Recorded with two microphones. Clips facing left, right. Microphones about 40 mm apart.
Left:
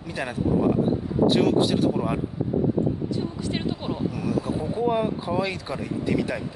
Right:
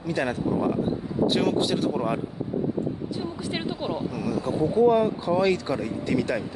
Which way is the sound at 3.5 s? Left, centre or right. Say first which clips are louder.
Right 1 dB; centre.